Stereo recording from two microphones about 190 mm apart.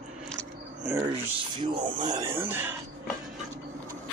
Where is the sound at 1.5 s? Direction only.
25° right (ahead or behind).